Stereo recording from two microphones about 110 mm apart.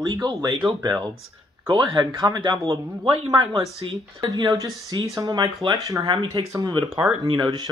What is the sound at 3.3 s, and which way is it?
Speech, 45° right (ahead or behind).